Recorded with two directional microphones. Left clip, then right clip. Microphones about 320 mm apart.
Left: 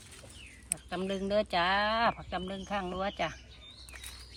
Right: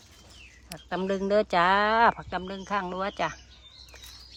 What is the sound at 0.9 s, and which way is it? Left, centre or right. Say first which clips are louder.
Speech: right 7 dB; centre.